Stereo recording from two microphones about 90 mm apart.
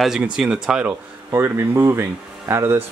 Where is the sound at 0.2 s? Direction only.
5° right (ahead or behind).